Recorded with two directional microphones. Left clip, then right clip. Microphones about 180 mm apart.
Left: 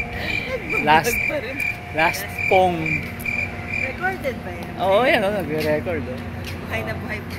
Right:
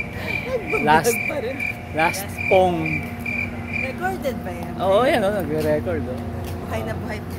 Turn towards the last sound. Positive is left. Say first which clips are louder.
# even
turn(degrees=5)  # may be behind; listen again after turning